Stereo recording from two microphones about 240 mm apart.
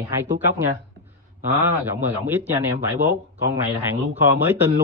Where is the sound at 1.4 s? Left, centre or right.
Centre.